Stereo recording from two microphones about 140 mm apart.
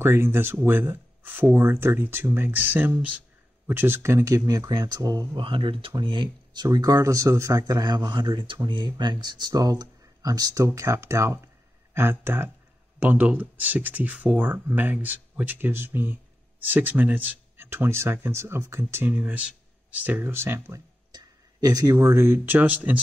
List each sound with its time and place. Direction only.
0.0 s speech: 15° right (ahead or behind)
5.4 s speech: 40° right (ahead or behind); by 22.9 s 10° right (ahead or behind)